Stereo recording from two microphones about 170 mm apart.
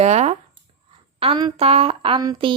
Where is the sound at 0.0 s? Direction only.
40° right (ahead or behind).